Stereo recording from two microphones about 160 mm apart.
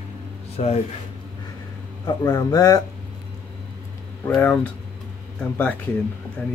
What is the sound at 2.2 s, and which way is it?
Speech, 20° left (ahead or behind).